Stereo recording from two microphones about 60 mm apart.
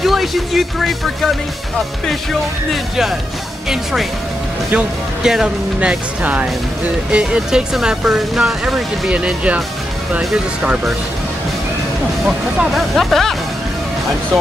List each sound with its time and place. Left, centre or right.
0.0 s speech: centre
2.7 s speech: centre
9.1 s speech: centre
12.7 s speech: centre